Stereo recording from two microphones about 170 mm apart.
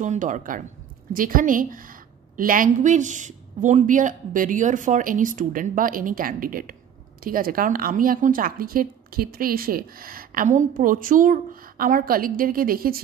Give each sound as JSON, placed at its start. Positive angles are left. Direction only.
{"t": 0.0, "sound": "a woman's voice", "side_deg": -50}